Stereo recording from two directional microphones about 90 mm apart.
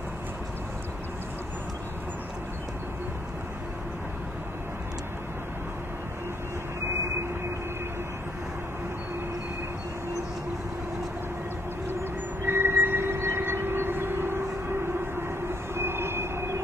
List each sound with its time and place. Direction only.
12.4 s train: 25° right (ahead or behind)
15.7 s train: 25° right (ahead or behind)